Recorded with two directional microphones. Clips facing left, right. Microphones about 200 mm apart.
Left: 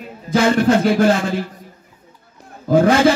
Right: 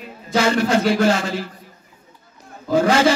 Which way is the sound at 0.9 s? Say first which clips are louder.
Left 3 dB; 55° left (ahead or behind).